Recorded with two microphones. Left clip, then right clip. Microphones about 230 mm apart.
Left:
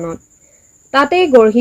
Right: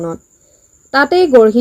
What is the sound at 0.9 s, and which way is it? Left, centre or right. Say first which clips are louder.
Speech: right 1 dB; centre.